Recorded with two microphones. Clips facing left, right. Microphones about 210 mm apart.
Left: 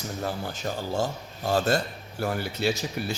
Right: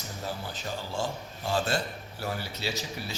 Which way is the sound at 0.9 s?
45° left (ahead or behind).